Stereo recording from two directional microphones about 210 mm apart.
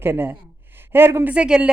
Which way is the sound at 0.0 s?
10° right (ahead or behind).